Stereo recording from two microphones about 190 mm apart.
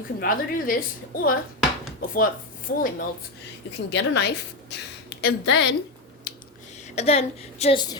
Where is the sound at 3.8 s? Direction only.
65° left (ahead or behind).